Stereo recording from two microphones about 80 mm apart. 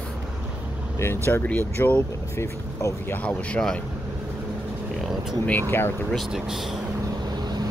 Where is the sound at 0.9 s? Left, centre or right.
Left.